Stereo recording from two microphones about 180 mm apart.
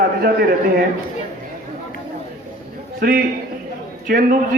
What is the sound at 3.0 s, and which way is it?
A man's voice, 55° right (ahead or behind).